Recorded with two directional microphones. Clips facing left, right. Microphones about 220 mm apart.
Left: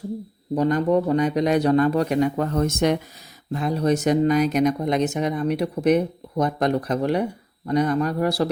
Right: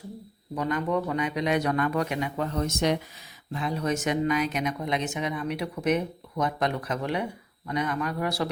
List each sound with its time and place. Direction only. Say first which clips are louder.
0.5 s speech: left 8 dB; 35° left (ahead or behind)